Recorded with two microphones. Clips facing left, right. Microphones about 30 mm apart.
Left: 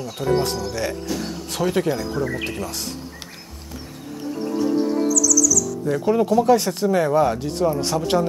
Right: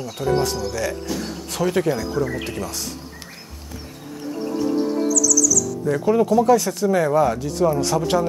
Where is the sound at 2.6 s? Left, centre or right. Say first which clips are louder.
Even; left.